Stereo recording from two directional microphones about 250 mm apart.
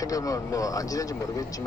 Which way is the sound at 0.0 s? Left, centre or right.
Centre.